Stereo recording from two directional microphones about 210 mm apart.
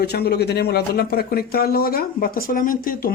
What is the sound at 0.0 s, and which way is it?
Speech, 50° left (ahead or behind).